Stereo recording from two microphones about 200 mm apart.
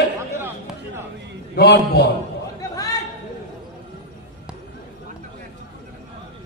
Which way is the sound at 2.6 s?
20° left (ahead or behind).